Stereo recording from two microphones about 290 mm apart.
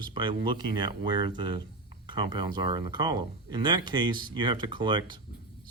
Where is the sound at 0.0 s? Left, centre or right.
Centre.